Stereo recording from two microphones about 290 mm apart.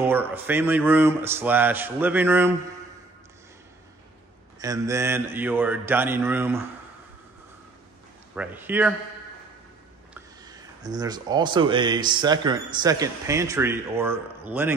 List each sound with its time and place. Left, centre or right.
0.0 s speech: centre
4.6 s speech: centre
8.4 s speech: centre
10.4 s speech: centre